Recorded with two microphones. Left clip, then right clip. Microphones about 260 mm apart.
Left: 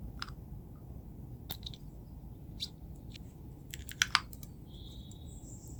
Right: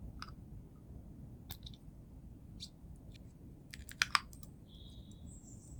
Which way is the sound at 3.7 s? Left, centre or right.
Centre.